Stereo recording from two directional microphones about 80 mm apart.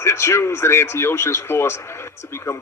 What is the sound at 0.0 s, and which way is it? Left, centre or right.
Speech, left.